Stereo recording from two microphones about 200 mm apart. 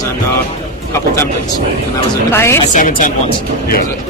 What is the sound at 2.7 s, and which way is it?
Speech, 40° left (ahead or behind).